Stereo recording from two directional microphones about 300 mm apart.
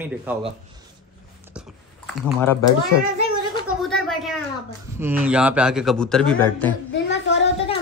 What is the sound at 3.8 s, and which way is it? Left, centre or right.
A man's voice, centre.